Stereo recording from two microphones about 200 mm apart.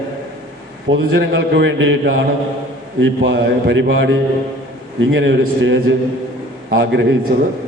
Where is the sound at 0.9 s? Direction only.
65° right (ahead or behind).